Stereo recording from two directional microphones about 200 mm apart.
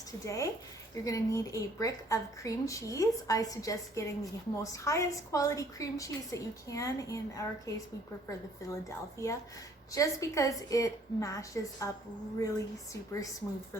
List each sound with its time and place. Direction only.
0.3 s a woman's voice: 15° left (ahead or behind)
8.7 s a woman's voice: 15° left (ahead or behind)